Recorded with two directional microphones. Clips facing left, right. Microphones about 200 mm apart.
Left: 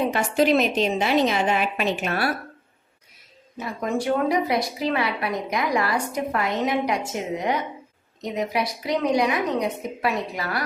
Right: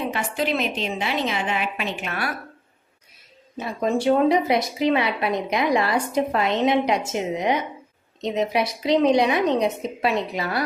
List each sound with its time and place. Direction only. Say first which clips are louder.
0.1 s a woman's voice: left 5 dB; 40° left (ahead or behind)
3.6 s a woman's voice: right 3 dB; 25° right (ahead or behind)